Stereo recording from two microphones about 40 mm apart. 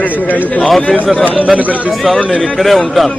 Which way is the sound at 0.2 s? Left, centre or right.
Left.